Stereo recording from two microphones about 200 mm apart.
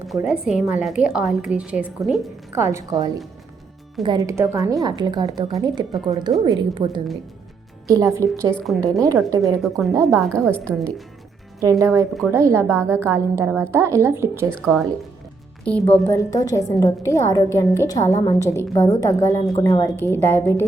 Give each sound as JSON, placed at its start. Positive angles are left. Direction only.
{"t": 0.1, "sound": "a woman's voice", "side_deg": 0}
{"t": 8.5, "sound": "a woman's voice", "side_deg": 0}
{"t": 8.8, "sound": "a woman's voice", "side_deg": -15}
{"t": 9.6, "sound": "a woman's voice", "side_deg": 0}
{"t": 11.6, "sound": "a woman's voice", "side_deg": -15}